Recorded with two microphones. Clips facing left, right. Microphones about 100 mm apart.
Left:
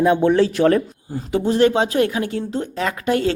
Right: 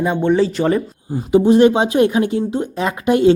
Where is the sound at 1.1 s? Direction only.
15° right (ahead or behind).